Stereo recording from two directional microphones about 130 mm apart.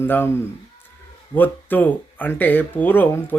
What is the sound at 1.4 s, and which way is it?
A man's voice, 15° left (ahead or behind).